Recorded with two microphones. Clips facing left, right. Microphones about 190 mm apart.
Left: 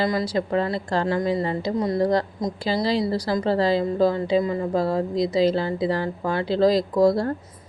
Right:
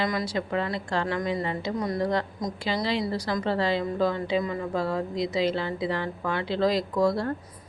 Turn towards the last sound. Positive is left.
turn(degrees=35)  # may be behind; listen again after turning